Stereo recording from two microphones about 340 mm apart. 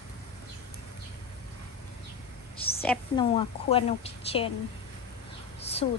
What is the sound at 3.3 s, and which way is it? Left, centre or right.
A woman's voice, centre.